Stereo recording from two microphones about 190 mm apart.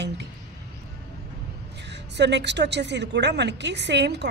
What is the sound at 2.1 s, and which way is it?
Speech, 65° right (ahead or behind).